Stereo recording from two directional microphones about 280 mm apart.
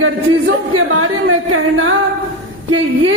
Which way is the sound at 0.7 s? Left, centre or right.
Right.